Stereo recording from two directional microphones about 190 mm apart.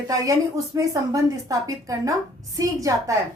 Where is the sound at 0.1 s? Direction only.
15° right (ahead or behind).